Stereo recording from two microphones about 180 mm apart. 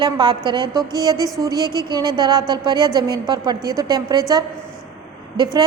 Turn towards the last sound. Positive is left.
turn(degrees=-20)  # may be behind; listen again after turning